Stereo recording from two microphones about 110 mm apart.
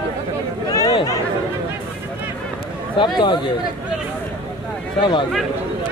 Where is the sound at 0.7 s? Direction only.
35° left (ahead or behind).